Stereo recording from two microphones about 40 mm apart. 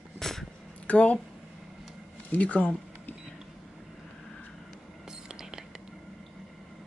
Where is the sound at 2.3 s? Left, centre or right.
Left.